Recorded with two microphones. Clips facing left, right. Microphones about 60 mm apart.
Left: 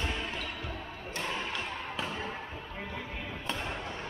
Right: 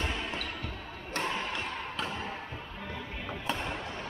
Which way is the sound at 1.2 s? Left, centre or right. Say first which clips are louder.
Right 1 dB; centre.